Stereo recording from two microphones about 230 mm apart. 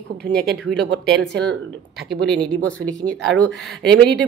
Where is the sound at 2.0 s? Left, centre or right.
Centre.